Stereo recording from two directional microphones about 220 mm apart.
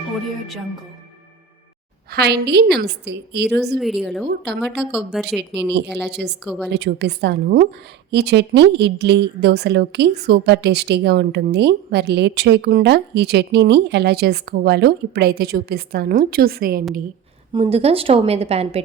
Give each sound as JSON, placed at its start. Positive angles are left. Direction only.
{"t": 2.1, "sound": "a woman's voice", "side_deg": -50}
{"t": 3.8, "sound": "speech", "side_deg": 0}
{"t": 5.4, "sound": "a woman's voice", "side_deg": -50}
{"t": 6.4, "sound": "speech", "side_deg": -5}
{"t": 6.7, "sound": "a woman's voice", "side_deg": -50}
{"t": 17.5, "sound": "a woman's voice", "side_deg": -25}